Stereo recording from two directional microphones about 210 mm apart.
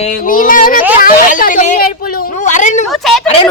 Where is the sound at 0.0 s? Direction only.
40° left (ahead or behind).